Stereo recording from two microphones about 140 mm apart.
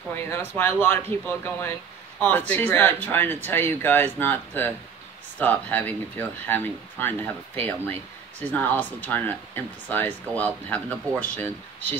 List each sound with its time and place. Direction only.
0.1 s a man's voice: 15° left (ahead or behind)